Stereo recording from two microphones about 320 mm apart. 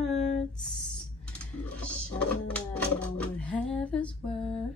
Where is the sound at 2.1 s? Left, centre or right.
Centre.